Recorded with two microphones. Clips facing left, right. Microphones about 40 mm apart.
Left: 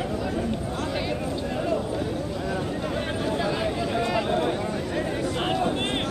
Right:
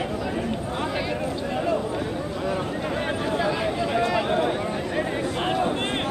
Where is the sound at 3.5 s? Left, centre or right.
Centre; by 5.3 s right.